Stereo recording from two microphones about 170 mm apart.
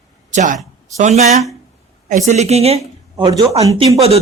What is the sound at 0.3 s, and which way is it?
Speech, 45° right (ahead or behind).